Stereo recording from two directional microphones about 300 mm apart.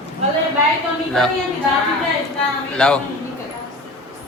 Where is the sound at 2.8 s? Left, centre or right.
Centre.